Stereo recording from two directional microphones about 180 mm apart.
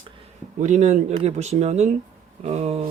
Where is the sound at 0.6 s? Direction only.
40° right (ahead or behind).